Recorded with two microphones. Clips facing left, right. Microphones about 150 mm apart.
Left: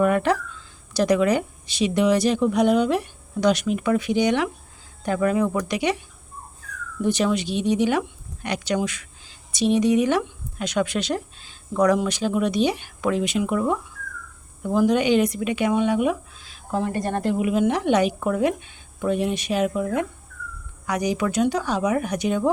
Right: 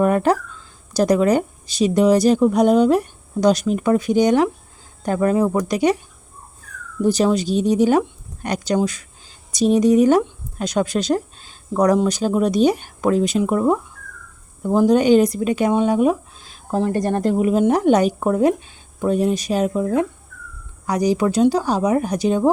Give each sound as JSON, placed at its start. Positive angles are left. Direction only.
{"t": 0.0, "sound": "speech", "side_deg": -40}
{"t": 7.0, "sound": "speech", "side_deg": -35}